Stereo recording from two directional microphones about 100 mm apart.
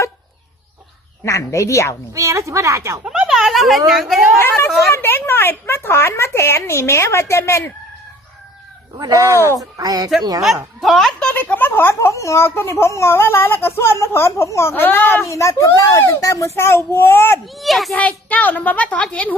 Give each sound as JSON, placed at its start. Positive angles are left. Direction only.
{"t": 1.2, "sound": "a woman's voice", "side_deg": 30}
{"t": 2.1, "sound": "a woman's voice", "side_deg": -30}
{"t": 3.0, "sound": "speech", "side_deg": -10}
{"t": 4.4, "sound": "a woman's voice", "side_deg": 25}
{"t": 9.0, "sound": "speech", "side_deg": -35}
{"t": 10.4, "sound": "a woman's voice", "side_deg": 0}
{"t": 11.3, "sound": "a woman's voice", "side_deg": 15}
{"t": 17.4, "sound": "a woman's voice", "side_deg": 0}
{"t": 17.9, "sound": "a woman's voice", "side_deg": 15}